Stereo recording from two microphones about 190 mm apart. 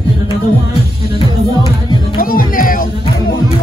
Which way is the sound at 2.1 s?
50° left (ahead or behind).